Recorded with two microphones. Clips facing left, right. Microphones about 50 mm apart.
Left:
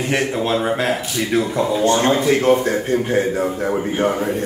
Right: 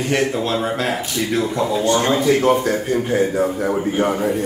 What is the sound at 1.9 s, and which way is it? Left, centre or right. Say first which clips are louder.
A man's voice: even; left.